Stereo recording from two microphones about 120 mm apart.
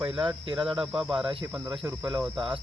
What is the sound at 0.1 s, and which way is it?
Cricket, 45° right (ahead or behind).